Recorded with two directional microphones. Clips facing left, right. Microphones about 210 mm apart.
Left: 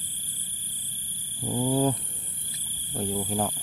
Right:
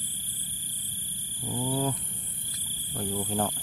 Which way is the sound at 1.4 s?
40° left (ahead or behind).